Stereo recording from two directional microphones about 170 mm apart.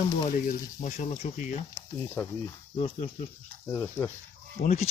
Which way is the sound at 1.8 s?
15° left (ahead or behind).